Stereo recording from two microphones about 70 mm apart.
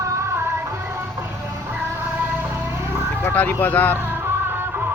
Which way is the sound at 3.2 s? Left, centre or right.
Left.